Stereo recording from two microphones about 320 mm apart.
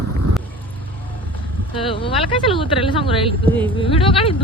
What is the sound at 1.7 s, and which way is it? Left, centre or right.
Speech, centre.